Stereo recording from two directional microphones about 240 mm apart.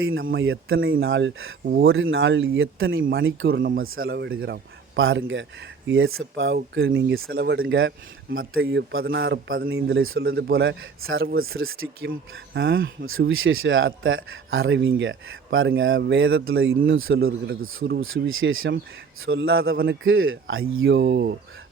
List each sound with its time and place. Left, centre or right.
0.0 s a man's voice: right
1.6 s a man's voice: right
1.9 s speech: right
3.5 s a man's voice: right
4.9 s a man's voice: right
7.6 s a man's voice: right
9.9 s a man's voice: right
10.2 s a man's voice: right
10.8 s a man's voice: right
17.2 s a man's voice: right
17.6 s a man's voice: right
19.7 s a man's voice: right
20.1 s a man's voice: right